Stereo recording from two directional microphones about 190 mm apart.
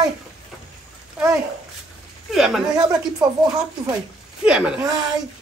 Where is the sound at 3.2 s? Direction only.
20° right (ahead or behind).